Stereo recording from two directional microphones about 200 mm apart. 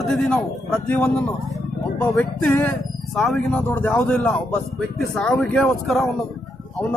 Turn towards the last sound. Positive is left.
turn(degrees=0)  # may be behind; listen again after turning